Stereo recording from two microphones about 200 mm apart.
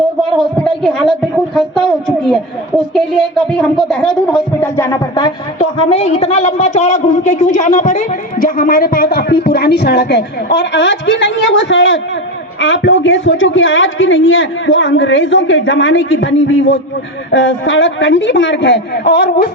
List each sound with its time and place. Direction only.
0.3 s a sound: centre (ahead or behind)
2.0 s a woman's voice: centre (ahead or behind)
4.8 s a woman's voice: 20° left (ahead or behind); by 19.5 s 55° left (ahead or behind)